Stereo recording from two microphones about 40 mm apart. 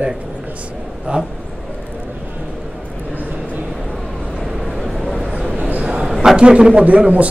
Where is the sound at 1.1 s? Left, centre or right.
Right.